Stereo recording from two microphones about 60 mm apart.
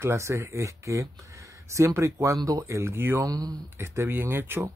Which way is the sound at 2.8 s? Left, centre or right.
Right.